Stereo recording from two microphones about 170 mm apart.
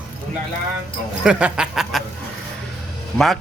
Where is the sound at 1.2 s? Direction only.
5° right (ahead or behind).